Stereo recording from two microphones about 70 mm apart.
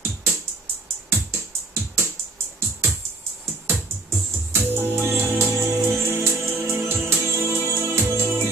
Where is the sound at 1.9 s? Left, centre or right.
Right.